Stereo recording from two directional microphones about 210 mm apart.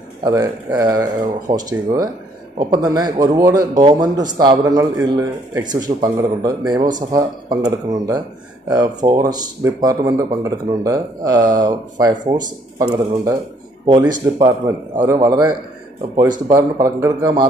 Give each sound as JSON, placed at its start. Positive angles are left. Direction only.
{"t": 0.2, "sound": "speech", "side_deg": -15}
{"t": 8.6, "sound": "speech", "side_deg": -20}